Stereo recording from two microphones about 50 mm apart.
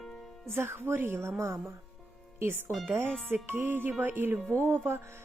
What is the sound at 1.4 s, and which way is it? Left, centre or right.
Speech, right.